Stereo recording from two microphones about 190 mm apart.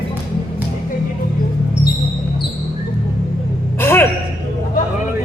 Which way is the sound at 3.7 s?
10° left (ahead or behind).